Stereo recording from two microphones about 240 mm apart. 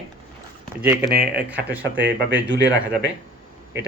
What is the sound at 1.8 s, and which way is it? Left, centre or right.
Speech, right.